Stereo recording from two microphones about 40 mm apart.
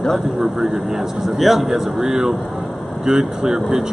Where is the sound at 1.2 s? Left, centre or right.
Centre.